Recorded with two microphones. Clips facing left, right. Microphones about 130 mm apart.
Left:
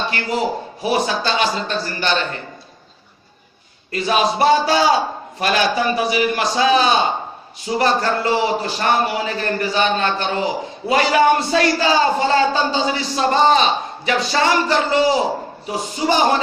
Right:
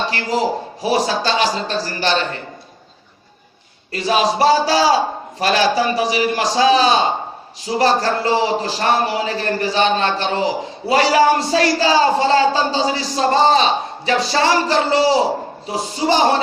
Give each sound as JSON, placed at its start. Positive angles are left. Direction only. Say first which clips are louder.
{"t": 0.0, "sound": "a man's voice", "louder": "right 2 dB", "side_deg": -35}
{"t": 3.9, "sound": "a man's voice", "louder": "right 1 dB", "side_deg": -35}